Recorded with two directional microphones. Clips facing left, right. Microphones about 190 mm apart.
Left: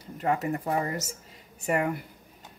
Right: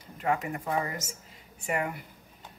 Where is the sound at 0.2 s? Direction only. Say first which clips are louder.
Left 2 dB; 40° left (ahead or behind).